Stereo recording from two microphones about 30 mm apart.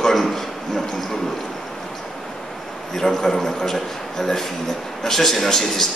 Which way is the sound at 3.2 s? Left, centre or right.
Centre.